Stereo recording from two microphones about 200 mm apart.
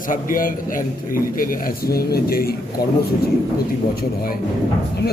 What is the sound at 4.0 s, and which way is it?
Speech, 45° left (ahead or behind).